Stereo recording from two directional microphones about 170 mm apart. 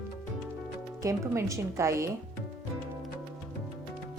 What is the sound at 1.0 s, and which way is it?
Speech, 20° right (ahead or behind).